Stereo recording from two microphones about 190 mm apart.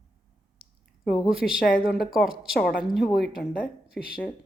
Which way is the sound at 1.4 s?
5° left (ahead or behind).